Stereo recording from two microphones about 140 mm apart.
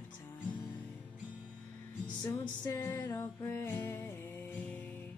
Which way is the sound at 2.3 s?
30° left (ahead or behind).